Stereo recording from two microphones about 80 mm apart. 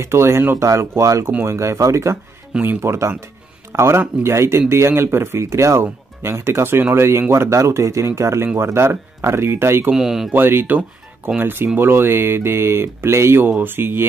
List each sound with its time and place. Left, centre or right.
0.0 s speech: right
9.9 s speech: centre
10.3 s speech: right